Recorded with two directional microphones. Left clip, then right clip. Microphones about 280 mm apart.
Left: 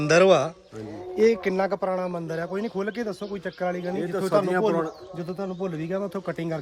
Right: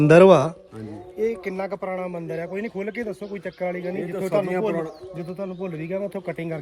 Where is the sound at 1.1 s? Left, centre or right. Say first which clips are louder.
Left 5 dB; left.